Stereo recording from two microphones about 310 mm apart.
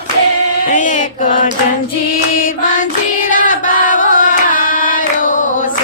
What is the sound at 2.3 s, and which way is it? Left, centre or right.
Singing, left.